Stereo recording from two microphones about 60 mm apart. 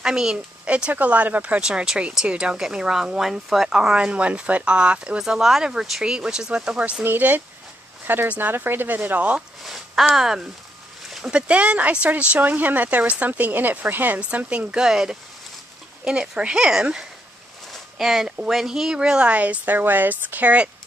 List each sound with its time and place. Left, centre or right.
0.0 s speech: centre
1.6 s speech: centre
6.8 s speech: right
9.6 s speech: centre
11.2 s speech: centre
17.9 s speech: centre; by 20.7 s right